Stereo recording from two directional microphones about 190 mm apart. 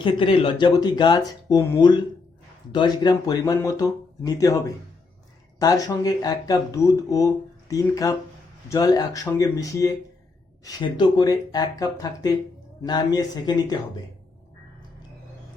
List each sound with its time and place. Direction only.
0.0 s speech: 25° left (ahead or behind)